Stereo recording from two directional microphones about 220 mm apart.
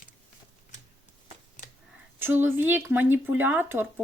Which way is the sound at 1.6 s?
35° left (ahead or behind).